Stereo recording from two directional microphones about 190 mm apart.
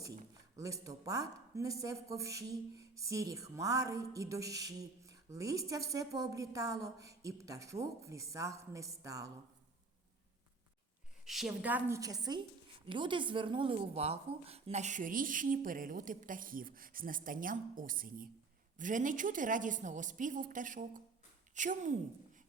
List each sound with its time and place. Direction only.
0.5 s speech: 15° right (ahead or behind)
11.3 s a woman's voice: centre (ahead or behind); by 21.9 s 40° right (ahead or behind)